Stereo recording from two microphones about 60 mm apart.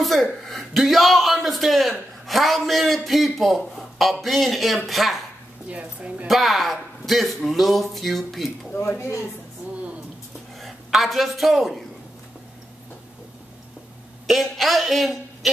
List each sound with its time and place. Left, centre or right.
0.0 s speech: centre
5.7 s a woman's voice: right
6.2 s speech: centre
8.7 s speech: left
10.6 s a woman's voice: centre
14.2 s a man's voice: centre